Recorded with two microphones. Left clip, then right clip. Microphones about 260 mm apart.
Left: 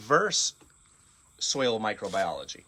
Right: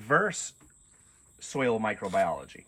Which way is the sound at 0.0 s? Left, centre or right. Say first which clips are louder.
Left 1 dB; centre.